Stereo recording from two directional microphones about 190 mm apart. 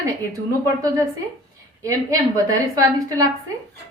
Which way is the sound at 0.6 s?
15° right (ahead or behind).